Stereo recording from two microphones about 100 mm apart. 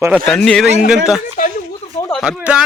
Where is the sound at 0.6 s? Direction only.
5° right (ahead or behind).